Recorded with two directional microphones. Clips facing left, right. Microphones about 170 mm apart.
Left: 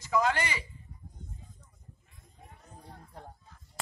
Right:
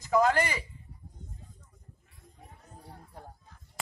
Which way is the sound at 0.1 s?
45° right (ahead or behind).